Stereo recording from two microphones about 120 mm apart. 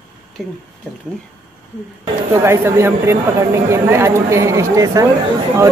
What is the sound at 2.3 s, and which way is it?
Speech, 25° right (ahead or behind).